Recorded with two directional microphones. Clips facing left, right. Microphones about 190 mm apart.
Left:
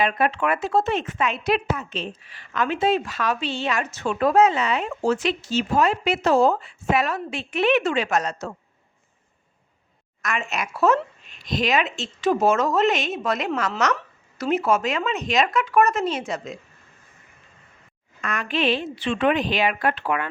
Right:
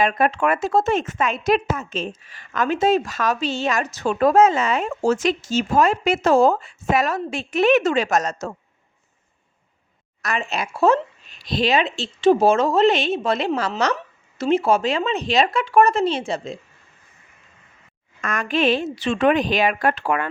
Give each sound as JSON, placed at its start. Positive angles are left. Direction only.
{"t": 0.0, "sound": "speech", "side_deg": -45}
{"t": 10.2, "sound": "speech", "side_deg": -35}
{"t": 18.2, "sound": "speech", "side_deg": -45}